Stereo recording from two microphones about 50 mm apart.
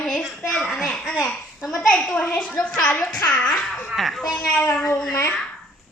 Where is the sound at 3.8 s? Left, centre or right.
Centre.